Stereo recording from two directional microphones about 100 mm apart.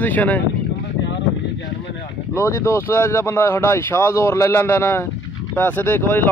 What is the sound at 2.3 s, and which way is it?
Speech, 30° left (ahead or behind).